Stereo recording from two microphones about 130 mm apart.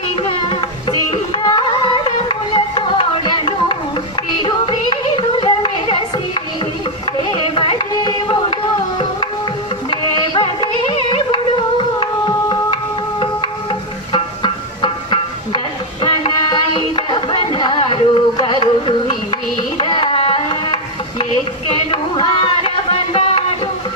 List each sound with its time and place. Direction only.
0.2 s music: 40° left (ahead or behind)
19.7 s tabla: 40° left (ahead or behind)
21.7 s a sound: 40° left (ahead or behind)